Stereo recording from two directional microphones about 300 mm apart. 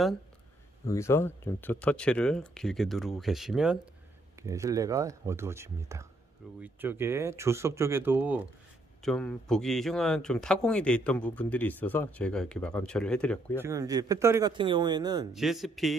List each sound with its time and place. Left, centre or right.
0.8 s speech: centre
13.6 s speech: centre
15.3 s speech: centre